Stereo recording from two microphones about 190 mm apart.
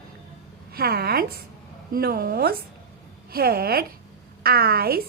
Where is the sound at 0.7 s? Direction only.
55° right (ahead or behind).